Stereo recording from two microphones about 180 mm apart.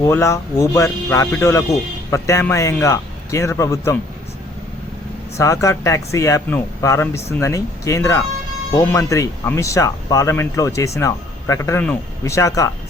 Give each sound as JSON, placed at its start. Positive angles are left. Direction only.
{"t": 0.0, "sound": "speech", "side_deg": 15}
{"t": 5.4, "sound": "speech", "side_deg": 15}